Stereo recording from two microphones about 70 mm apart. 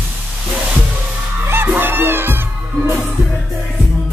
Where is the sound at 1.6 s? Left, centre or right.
Right.